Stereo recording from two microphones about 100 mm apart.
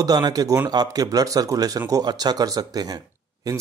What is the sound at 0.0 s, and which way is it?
Speech, 40° right (ahead or behind).